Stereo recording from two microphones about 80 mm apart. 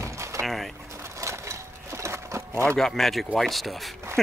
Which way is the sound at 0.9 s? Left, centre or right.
Right.